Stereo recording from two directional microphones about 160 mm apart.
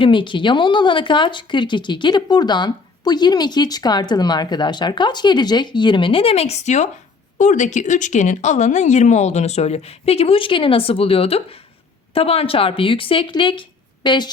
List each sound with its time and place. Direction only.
0.0 s speech: 30° left (ahead or behind)